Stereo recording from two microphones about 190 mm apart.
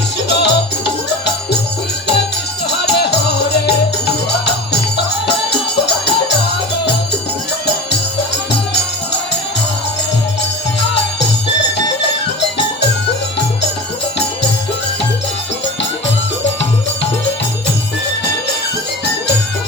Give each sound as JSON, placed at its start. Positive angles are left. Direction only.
{"t": 0.3, "sound": "music", "side_deg": 60}
{"t": 2.6, "sound": "music", "side_deg": 60}
{"t": 10.8, "sound": "music", "side_deg": 65}